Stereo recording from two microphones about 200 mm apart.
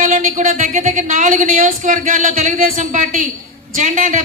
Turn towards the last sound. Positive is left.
turn(degrees=-40)  # may be behind; listen again after turning